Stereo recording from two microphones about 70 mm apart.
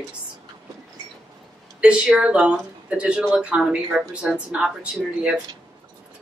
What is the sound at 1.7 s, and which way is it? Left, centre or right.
Speech, centre.